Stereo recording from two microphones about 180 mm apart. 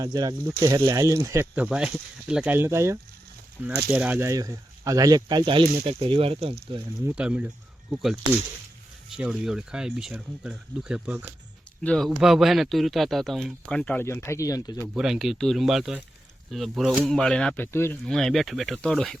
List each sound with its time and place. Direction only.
0.0 s speech: 20° right (ahead or behind)
7.2 s speech: 5° right (ahead or behind)
11.8 s speech: 5° left (ahead or behind)
14.9 s speech: 5° right (ahead or behind); by 17.9 s 15° left (ahead or behind)
18.0 s speech: centre (ahead or behind)